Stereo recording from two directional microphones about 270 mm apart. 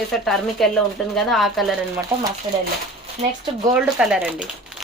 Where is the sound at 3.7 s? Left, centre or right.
Centre.